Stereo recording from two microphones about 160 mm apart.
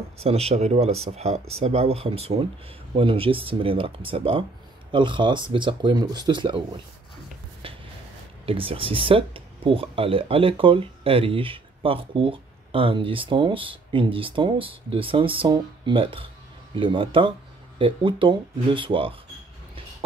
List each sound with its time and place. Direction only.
0.2 s speech: 40° right (ahead or behind)
7.6 s a sound: 35° right (ahead or behind)
8.5 s speech: 35° right (ahead or behind)